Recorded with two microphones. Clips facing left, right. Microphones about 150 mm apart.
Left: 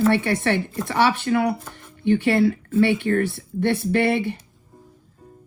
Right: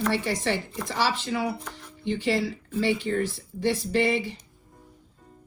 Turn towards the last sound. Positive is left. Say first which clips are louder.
# left 4 dB
turn(degrees=60)  # may be behind; listen again after turning